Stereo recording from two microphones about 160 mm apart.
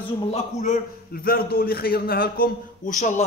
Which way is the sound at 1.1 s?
70° left (ahead or behind).